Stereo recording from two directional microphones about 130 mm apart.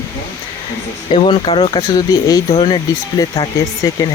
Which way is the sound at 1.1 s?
45° left (ahead or behind).